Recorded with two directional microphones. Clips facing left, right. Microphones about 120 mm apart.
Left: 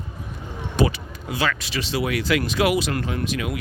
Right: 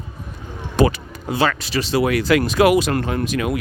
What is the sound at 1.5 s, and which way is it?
Speech, 40° right (ahead or behind).